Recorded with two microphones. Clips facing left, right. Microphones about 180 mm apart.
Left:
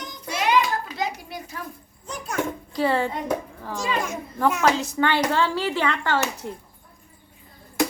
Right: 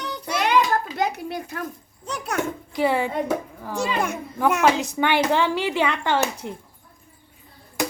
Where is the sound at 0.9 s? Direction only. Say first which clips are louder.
Right 4 dB; 55° right (ahead or behind).